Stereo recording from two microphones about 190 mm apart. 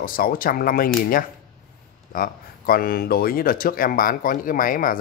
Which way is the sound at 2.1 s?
50° left (ahead or behind).